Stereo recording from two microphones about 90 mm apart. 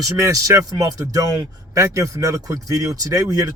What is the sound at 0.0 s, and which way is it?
Speech, 40° right (ahead or behind).